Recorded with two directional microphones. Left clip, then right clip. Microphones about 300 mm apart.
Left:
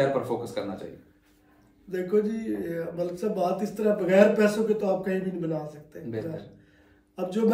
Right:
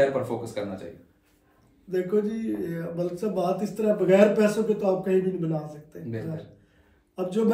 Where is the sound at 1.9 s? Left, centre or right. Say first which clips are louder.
Even; centre.